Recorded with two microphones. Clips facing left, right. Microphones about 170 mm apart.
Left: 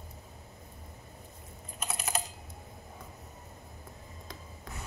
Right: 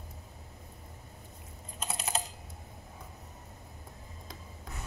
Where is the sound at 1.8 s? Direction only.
25° right (ahead or behind).